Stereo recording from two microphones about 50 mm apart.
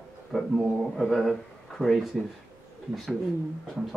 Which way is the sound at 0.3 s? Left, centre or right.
Centre.